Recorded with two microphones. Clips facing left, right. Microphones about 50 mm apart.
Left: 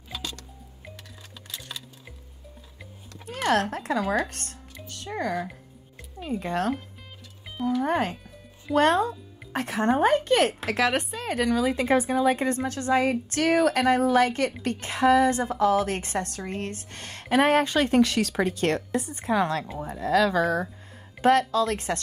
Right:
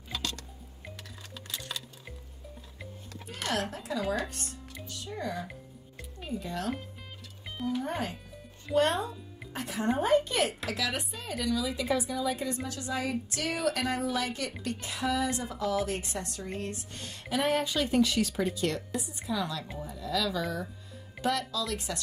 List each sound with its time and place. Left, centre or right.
0.1 s music: centre
3.3 s a sound: left
3.7 s a woman's voice: left
5.5 s music: centre
6.3 s a woman's voice: left
7.5 s music: centre
7.8 s a woman's voice: left